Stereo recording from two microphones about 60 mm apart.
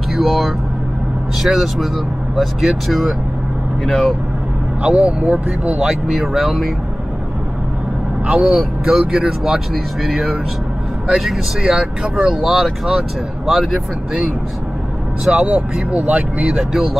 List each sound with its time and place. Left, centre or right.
0.1 s speech: centre
4.8 s speech: right
6.2 s speech: centre
8.3 s speech: right
8.5 s speech: centre
15.3 s speech: right